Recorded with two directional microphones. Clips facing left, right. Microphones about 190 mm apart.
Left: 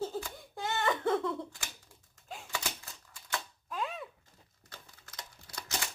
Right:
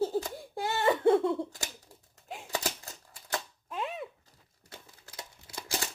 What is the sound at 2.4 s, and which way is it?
Typewriter, 40° right (ahead or behind).